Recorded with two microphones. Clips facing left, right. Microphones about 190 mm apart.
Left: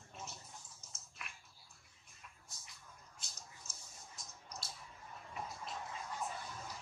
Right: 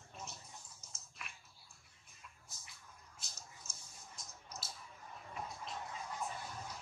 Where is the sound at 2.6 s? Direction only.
Centre (ahead or behind).